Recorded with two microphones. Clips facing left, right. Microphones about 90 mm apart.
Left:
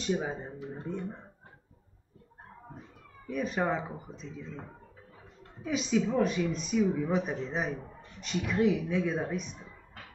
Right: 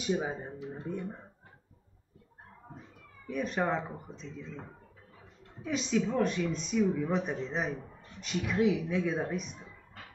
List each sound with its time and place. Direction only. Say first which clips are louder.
0.0 s speech: even; 5° right (ahead or behind)
0.6 s speech: even; 40° left (ahead or behind)
3.3 s speech: left 1 dB; centre (ahead or behind)
5.6 s speech: left 1 dB; centre (ahead or behind)